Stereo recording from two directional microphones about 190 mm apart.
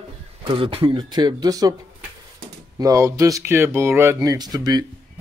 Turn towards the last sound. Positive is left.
turn(degrees=-20)  # may be behind; listen again after turning